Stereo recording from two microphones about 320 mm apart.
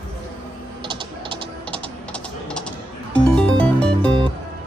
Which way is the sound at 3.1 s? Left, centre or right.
Centre.